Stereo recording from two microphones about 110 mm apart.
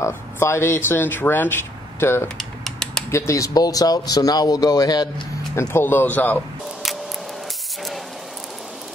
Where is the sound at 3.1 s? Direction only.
25° left (ahead or behind).